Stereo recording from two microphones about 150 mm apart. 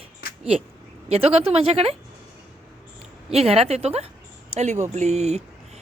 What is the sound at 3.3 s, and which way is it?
Speech, 40° right (ahead or behind).